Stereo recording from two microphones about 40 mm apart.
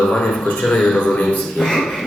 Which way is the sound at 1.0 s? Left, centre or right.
Left.